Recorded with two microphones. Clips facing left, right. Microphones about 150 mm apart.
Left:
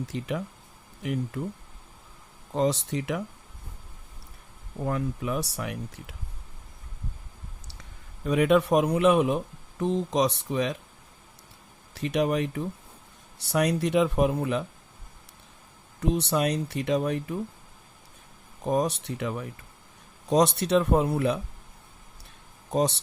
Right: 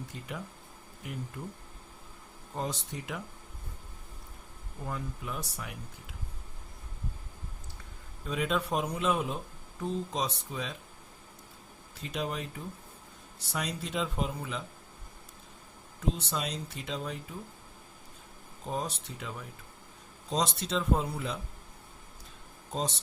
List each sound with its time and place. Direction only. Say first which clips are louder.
0.0 s speech: left 9 dB; 85° left
2.5 s speech: left 11 dB; 85° left
4.8 s speech: left 9 dB; 75° left (ahead or behind)
8.2 s speech: left 10 dB; 65° left (ahead or behind)
11.9 s speech: left 10 dB; 70° left (ahead or behind)
16.0 s speech: left 8 dB; 70° left (ahead or behind)
18.6 s speech: left 10 dB; 70° left (ahead or behind)
22.7 s speech: left 9 dB; 70° left (ahead or behind)